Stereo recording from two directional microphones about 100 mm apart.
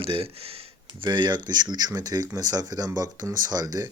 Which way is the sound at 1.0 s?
45° right (ahead or behind).